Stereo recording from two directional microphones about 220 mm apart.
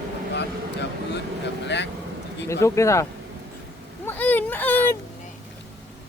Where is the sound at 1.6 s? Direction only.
50° left (ahead or behind).